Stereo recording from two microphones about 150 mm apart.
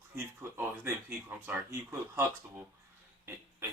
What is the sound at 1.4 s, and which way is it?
Speech, 15° right (ahead or behind).